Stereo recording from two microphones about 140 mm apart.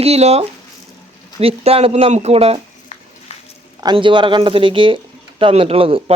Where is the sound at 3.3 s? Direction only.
50° left (ahead or behind).